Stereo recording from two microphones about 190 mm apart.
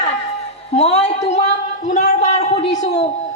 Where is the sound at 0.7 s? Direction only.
35° left (ahead or behind).